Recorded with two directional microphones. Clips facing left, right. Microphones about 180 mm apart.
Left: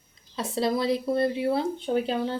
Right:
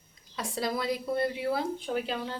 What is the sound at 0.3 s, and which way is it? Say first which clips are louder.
Speech: left 6 dB; 25° left (ahead or behind).